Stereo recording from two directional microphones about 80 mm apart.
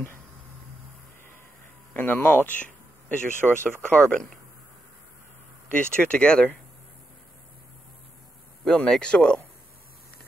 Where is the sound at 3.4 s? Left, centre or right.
Centre.